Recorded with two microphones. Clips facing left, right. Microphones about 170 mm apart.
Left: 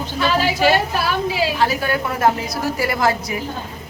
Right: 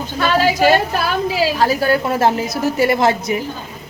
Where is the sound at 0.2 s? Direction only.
45° right (ahead or behind); by 3.3 s 25° right (ahead or behind).